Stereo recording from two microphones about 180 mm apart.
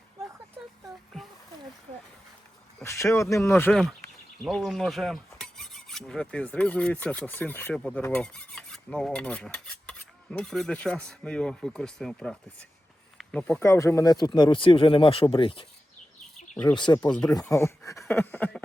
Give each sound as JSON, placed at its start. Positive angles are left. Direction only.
{"t": 0.9, "sound": "a sound", "side_deg": 0}
{"t": 2.8, "sound": "speech", "side_deg": 15}
{"t": 3.5, "sound": "speech", "side_deg": 5}
{"t": 4.4, "sound": "filing", "side_deg": 0}
{"t": 10.3, "sound": "speech", "side_deg": 5}
{"t": 13.1, "sound": "a sound", "side_deg": 5}
{"t": 13.6, "sound": "speech", "side_deg": 15}
{"t": 16.7, "sound": "speech", "side_deg": 25}
{"t": 17.1, "sound": "speech", "side_deg": 5}
{"t": 17.5, "sound": "speech", "side_deg": 15}